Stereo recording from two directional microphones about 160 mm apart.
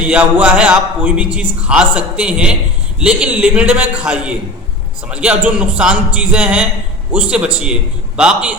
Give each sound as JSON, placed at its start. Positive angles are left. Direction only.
{"t": 0.0, "sound": "a man's voice", "side_deg": -10}